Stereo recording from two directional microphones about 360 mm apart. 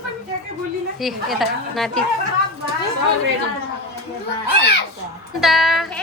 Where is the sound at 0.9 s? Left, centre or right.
Centre.